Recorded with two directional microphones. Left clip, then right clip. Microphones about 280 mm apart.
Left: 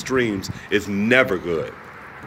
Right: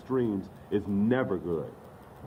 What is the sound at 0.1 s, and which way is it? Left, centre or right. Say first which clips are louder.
Speech: left 8 dB; left.